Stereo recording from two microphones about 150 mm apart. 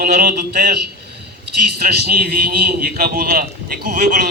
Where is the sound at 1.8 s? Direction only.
90° right.